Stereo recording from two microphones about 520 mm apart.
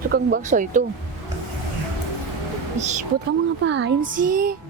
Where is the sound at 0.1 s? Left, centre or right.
Centre.